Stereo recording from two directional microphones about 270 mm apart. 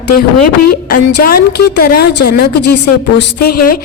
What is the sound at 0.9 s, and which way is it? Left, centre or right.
A woman's voice, left.